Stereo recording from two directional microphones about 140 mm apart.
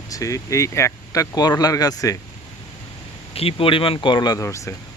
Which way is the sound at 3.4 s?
40° left (ahead or behind).